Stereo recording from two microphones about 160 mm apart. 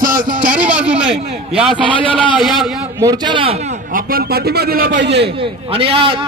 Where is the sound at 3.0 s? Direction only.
25° right (ahead or behind).